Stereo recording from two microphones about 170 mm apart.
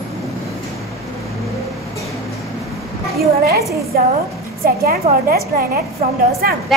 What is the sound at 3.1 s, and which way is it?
Speech, 65° right (ahead or behind).